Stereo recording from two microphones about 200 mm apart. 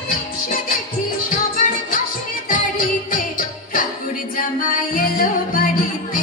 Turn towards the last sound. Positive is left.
turn(degrees=45)  # may be behind; listen again after turning